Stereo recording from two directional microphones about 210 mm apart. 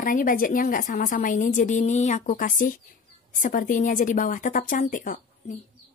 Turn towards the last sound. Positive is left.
turn(degrees=40)  # may be behind; listen again after turning